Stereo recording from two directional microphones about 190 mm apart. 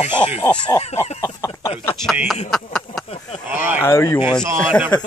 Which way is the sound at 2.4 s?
Centre (ahead or behind).